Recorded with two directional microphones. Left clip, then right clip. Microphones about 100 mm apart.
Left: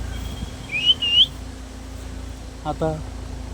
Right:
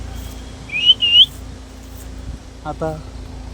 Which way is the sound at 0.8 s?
20° right (ahead or behind).